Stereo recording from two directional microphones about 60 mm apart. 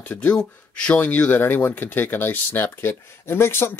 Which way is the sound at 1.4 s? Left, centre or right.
Left.